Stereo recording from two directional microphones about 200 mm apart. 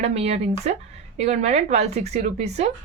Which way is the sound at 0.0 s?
30° right (ahead or behind).